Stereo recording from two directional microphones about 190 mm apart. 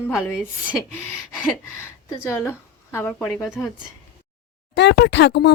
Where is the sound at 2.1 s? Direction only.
15° left (ahead or behind).